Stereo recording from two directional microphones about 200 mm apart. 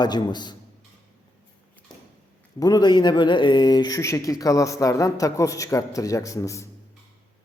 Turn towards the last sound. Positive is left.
turn(degrees=15)  # may be behind; listen again after turning